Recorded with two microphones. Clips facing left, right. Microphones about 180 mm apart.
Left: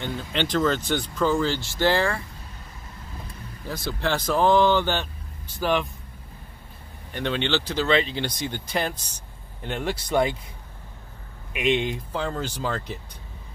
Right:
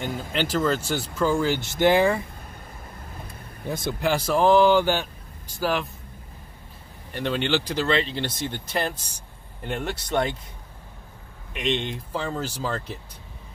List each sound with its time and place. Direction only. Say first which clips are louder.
0.3 s speech: left 1 dB; 5° right (ahead or behind)
3.6 s speech: right 2 dB; 20° right (ahead or behind)
4.1 s speech: right 1 dB; 10° right (ahead or behind)
7.1 s speech: right 1 dB; centre (ahead or behind)
11.5 s speech: left 3 dB; 5° left (ahead or behind)